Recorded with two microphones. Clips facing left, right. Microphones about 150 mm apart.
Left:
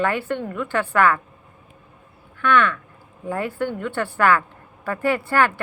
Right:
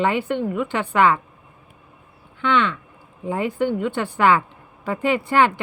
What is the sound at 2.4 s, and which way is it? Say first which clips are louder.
A woman's voice: left 1 dB; 20° right (ahead or behind).